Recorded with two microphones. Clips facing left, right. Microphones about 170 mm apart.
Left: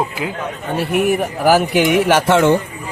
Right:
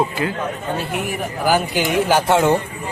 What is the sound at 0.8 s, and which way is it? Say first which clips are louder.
A man's voice: left 8 dB; 70° left (ahead or behind).